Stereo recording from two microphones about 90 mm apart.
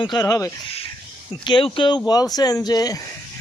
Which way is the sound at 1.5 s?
70° left (ahead or behind).